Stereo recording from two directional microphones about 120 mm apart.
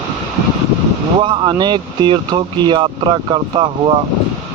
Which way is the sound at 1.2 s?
40° right (ahead or behind).